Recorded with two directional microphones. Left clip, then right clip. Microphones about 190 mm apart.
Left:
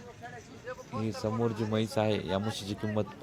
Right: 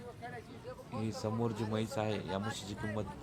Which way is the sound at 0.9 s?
15° left (ahead or behind).